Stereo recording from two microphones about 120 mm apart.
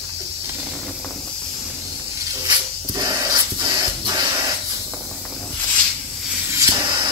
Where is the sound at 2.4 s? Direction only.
35° right (ahead or behind).